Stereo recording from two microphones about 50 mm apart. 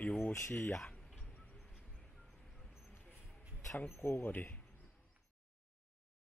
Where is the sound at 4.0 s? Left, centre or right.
Left.